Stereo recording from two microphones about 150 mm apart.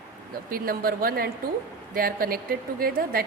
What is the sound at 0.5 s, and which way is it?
A woman's voice, 75° right (ahead or behind).